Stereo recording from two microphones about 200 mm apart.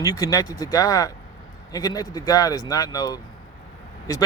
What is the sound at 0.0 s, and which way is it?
Speech, 15° left (ahead or behind).